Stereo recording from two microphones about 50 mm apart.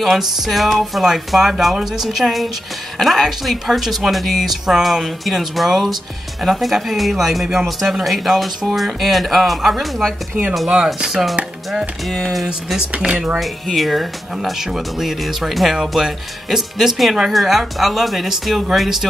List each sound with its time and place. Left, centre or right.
0.0 s speech: centre
13.0 s speech: centre
13.4 s speech: centre